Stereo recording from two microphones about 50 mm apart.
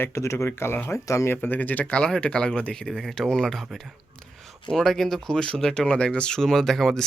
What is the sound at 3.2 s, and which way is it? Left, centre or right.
Speech, centre.